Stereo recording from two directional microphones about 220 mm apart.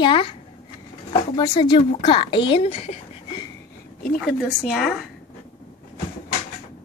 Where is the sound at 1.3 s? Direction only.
20° left (ahead or behind).